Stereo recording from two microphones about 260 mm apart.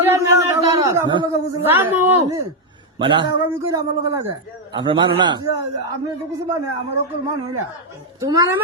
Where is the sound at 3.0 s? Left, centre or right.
Centre.